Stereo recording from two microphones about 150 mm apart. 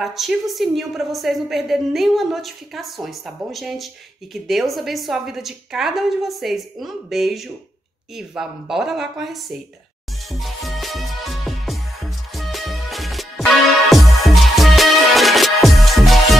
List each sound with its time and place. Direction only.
0.0 s a woman's voice: centre (ahead or behind)
10.4 s music: centre (ahead or behind)